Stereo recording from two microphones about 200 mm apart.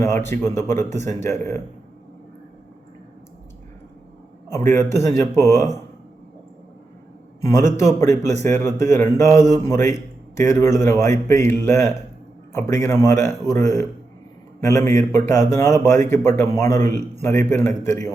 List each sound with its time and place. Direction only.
0.0 s a man's voice: 10° left (ahead or behind)
4.5 s a man's voice: 15° left (ahead or behind)
7.5 s a man's voice: 15° left (ahead or behind)
14.8 s a man's voice: 15° left (ahead or behind)